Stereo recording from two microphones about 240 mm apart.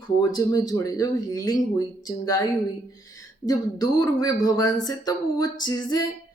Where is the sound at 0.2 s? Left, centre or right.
Centre.